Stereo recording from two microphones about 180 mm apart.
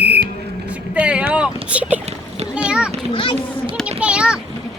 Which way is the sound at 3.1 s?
30° left (ahead or behind).